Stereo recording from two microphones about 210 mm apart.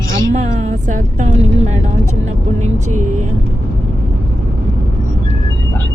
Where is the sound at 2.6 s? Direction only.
35° right (ahead or behind).